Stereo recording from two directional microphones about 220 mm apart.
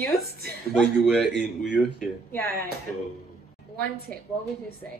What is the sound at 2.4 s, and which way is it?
Speech, 45° right (ahead or behind).